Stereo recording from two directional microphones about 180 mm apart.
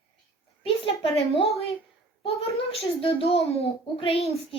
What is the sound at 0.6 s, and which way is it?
Speech, 30° left (ahead or behind).